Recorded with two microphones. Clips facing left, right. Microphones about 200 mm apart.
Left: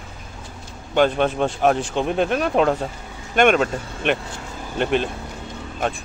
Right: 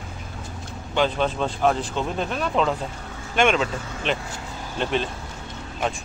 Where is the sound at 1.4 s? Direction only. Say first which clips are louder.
Left 2 dB; 65° left (ahead or behind).